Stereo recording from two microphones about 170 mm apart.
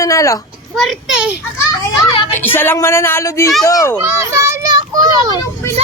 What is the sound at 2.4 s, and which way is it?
A child's voice, 10° left (ahead or behind).